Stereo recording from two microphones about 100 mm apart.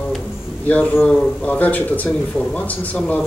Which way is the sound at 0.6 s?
15° left (ahead or behind).